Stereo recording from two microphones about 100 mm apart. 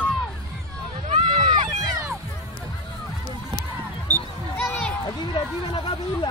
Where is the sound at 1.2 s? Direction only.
50° right (ahead or behind).